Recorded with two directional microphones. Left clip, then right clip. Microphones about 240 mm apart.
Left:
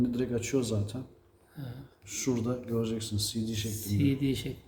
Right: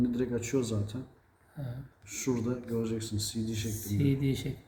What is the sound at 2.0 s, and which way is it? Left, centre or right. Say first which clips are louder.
A man's voice: left 1 dB; centre.